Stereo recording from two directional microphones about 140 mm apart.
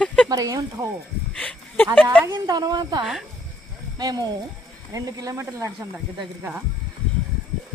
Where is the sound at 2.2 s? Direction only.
25° right (ahead or behind).